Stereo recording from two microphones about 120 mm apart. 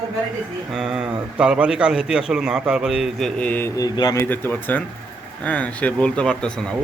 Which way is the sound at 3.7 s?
35° left (ahead or behind).